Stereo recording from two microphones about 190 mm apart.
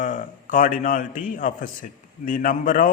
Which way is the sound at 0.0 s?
45° left (ahead or behind).